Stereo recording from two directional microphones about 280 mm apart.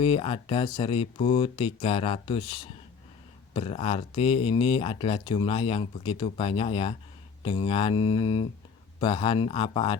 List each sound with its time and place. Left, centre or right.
0.0 s speech: centre